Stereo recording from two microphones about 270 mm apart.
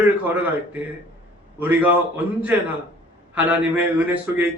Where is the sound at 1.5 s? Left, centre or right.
Centre.